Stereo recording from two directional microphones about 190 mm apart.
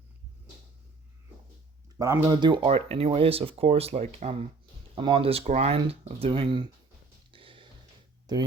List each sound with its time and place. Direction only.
2.0 s speech: 20° right (ahead or behind)
7.3 s a sound: 25° right (ahead or behind)
8.3 s speech: 20° right (ahead or behind)